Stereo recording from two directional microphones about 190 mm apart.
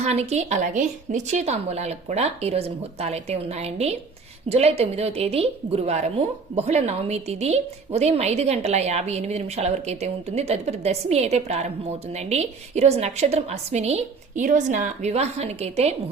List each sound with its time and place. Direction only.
0.0 s a woman's voice: 35° right (ahead or behind)